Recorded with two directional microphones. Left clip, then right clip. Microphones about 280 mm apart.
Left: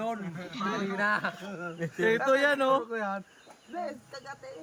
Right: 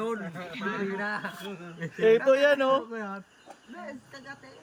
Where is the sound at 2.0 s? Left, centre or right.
Centre.